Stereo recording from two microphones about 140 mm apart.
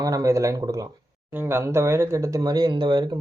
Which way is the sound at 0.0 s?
25° right (ahead or behind).